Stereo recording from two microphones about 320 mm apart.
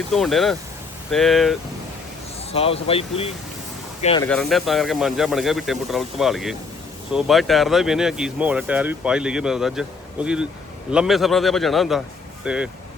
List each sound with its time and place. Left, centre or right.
0.1 s speech: centre
2.5 s speech: centre
4.3 s speech: centre